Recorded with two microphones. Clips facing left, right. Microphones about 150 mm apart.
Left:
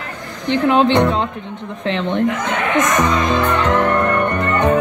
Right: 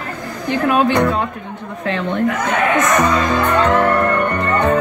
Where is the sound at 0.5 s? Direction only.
25° left (ahead or behind).